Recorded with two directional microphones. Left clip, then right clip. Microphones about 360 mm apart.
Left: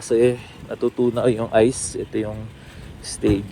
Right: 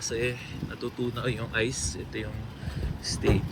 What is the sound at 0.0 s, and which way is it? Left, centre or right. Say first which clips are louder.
Speech: left 12 dB; centre.